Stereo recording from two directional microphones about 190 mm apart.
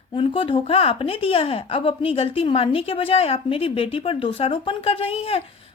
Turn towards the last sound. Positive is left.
turn(degrees=30)  # may be behind; listen again after turning